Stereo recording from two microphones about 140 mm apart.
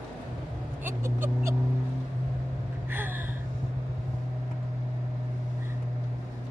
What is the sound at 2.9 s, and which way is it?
Gasp, 15° right (ahead or behind).